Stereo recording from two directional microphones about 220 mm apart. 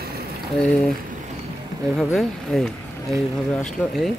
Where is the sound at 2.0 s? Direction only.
Centre (ahead or behind).